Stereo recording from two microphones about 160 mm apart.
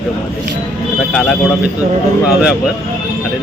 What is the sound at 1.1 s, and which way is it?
Speech, centre (ahead or behind).